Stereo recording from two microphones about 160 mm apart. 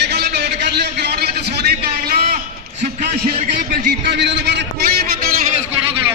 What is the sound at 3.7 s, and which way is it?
A man's voice, 80° right.